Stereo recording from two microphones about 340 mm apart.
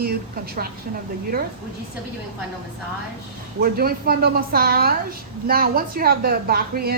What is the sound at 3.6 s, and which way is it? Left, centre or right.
A woman's voice, right.